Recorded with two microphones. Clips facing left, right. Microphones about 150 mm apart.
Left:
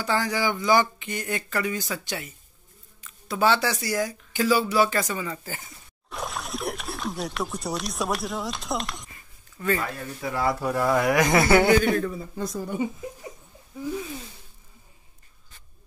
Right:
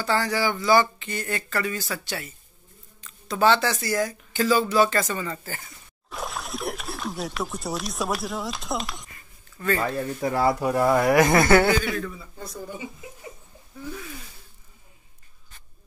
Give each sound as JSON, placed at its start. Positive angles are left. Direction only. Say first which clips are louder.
{"t": 0.0, "sound": "speech", "louder": "right 1 dB", "side_deg": 15}
{"t": 6.0, "sound": "a sound", "louder": "even", "side_deg": 0}
{"t": 9.6, "sound": "speech", "louder": "even", "side_deg": 15}
{"t": 9.9, "sound": "speech", "louder": "right 5 dB", "side_deg": -35}
{"t": 10.6, "sound": "speech", "louder": "right 2 dB", "side_deg": -10}
{"t": 11.4, "sound": "speech", "louder": "right 1 dB", "side_deg": 15}
{"t": 11.7, "sound": "a man's voice", "louder": "left 5 dB", "side_deg": 50}
{"t": 12.4, "sound": "speech", "louder": "left 6 dB", "side_deg": 90}